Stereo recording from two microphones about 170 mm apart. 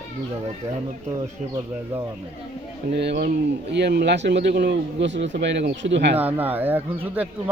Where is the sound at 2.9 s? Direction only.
75° right (ahead or behind).